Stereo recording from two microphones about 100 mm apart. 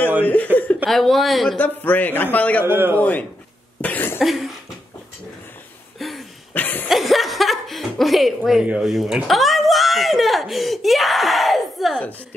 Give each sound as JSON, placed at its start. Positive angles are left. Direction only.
{"t": 0.2, "sound": "laughter", "side_deg": 15}
{"t": 0.8, "sound": "speech", "side_deg": 0}
{"t": 1.6, "sound": "a man's voice", "side_deg": 15}
{"t": 2.6, "sound": "a man's voice", "side_deg": -25}
{"t": 3.0, "sound": "a man's voice", "side_deg": 15}
{"t": 3.8, "sound": "cough", "side_deg": 20}
{"t": 4.2, "sound": "speech", "side_deg": 0}
{"t": 5.9, "sound": "a sound", "side_deg": 0}
{"t": 6.5, "sound": "chuckle", "side_deg": 20}
{"t": 6.9, "sound": "chuckle", "side_deg": 0}
{"t": 8.6, "sound": "speech", "side_deg": -5}